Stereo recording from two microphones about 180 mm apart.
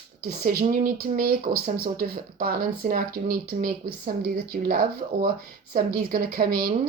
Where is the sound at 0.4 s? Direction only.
55° right (ahead or behind).